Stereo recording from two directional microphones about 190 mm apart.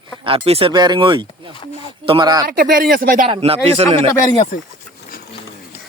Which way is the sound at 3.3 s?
30° right (ahead or behind).